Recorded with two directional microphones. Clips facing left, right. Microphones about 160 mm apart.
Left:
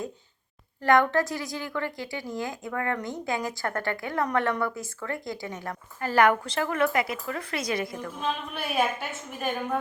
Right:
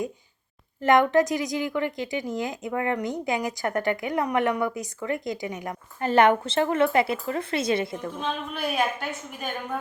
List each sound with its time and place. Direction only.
0.8 s a woman's voice: 20° right (ahead or behind)
8.2 s a woman's voice: 5° left (ahead or behind)